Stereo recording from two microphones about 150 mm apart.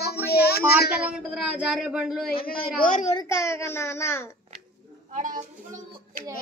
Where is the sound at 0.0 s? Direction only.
90° left.